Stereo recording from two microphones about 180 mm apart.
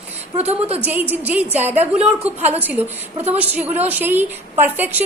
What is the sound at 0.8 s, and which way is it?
A woman's voice, 10° right (ahead or behind).